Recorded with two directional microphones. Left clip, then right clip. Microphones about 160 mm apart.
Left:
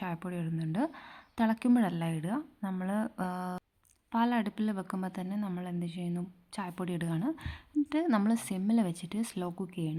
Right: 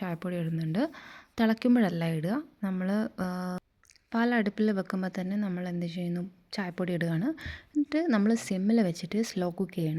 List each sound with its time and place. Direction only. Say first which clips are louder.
0.0 s a woman's voice: right 4 dB; 20° right (ahead or behind)